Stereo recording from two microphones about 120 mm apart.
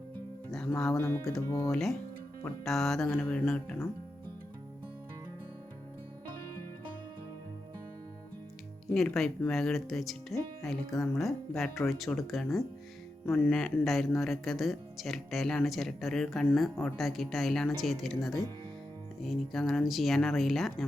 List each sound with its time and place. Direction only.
0.9 s speech: 25° left (ahead or behind)
1.7 s speech: centre (ahead or behind)
8.9 s speech: 5° left (ahead or behind)
13.5 s speech: 5° left (ahead or behind)